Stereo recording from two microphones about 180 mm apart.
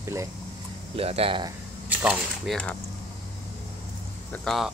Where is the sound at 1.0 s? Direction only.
30° right (ahead or behind).